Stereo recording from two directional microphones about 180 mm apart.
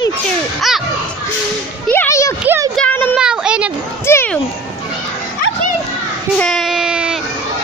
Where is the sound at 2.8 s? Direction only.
10° left (ahead or behind).